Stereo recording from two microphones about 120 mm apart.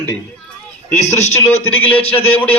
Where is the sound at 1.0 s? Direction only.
70° left (ahead or behind).